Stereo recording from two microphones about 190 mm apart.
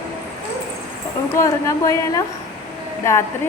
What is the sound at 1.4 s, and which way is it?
A woman's voice, 15° left (ahead or behind).